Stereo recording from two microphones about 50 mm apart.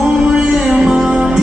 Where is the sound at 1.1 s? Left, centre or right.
Centre.